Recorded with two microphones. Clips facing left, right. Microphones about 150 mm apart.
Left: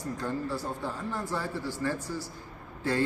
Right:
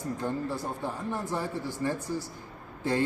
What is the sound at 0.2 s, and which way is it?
A man's voice, 15° right (ahead or behind).